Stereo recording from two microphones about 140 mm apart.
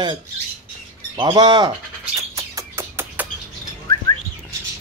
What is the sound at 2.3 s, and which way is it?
Music, 20° right (ahead or behind).